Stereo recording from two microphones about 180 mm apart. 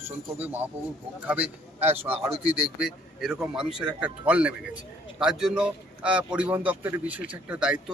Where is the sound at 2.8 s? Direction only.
5° right (ahead or behind).